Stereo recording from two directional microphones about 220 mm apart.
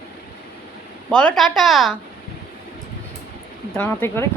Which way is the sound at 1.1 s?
5° left (ahead or behind).